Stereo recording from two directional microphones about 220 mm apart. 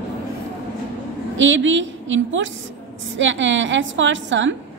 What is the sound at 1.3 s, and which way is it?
A woman's voice, 60° right (ahead or behind).